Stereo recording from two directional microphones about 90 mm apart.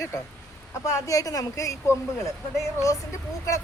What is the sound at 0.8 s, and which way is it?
Speech, 40° left (ahead or behind).